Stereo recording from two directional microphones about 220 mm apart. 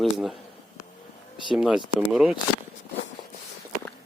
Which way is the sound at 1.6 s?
5° right (ahead or behind).